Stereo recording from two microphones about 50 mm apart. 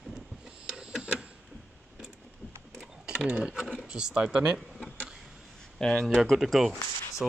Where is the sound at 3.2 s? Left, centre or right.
Right.